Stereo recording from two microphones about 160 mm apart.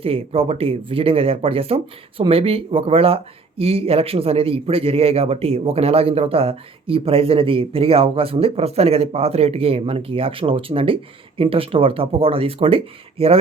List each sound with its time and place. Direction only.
0.0 s a man's voice: 35° right (ahead or behind)